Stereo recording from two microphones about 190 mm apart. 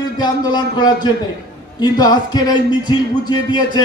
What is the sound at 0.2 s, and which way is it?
A man's voice, 20° left (ahead or behind).